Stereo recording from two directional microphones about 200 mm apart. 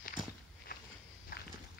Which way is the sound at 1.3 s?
50° left (ahead or behind).